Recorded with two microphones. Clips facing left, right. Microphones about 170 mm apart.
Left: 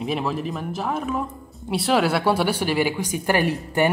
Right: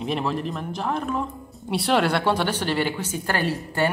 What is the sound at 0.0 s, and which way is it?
Speech, centre (ahead or behind).